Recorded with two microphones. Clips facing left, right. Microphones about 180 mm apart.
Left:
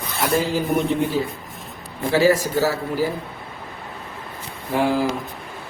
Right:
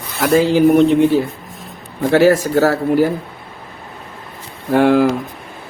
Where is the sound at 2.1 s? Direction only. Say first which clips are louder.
Right 5 dB; 70° right (ahead or behind).